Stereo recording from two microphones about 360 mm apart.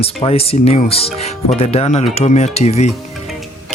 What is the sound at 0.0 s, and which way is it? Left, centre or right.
Speech, centre.